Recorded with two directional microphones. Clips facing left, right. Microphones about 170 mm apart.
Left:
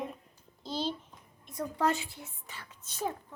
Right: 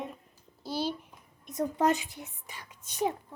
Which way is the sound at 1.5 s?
20° right (ahead or behind).